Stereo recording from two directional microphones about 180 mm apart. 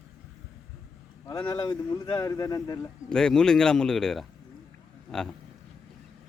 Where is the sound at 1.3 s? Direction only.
20° left (ahead or behind).